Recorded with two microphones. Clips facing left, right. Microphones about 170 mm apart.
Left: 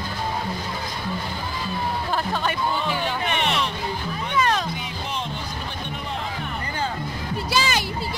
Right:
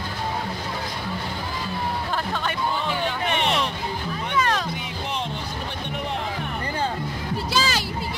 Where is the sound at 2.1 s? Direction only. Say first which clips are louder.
Left 2 dB; 15° left (ahead or behind).